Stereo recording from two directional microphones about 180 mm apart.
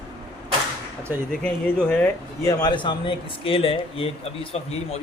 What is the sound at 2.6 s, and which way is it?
Speech, 25° left (ahead or behind).